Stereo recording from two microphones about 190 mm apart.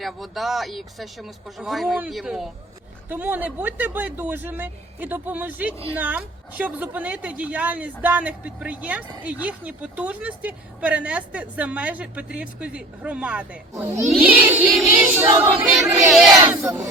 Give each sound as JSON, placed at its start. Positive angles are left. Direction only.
{"t": 0.0, "sound": "a woman's voice", "side_deg": 0}
{"t": 15.3, "sound": "female singing", "side_deg": -20}
{"t": 15.8, "sound": "a woman's voice", "side_deg": -15}
{"t": 16.0, "sound": "speech", "side_deg": 0}
{"t": 16.5, "sound": "speech", "side_deg": -15}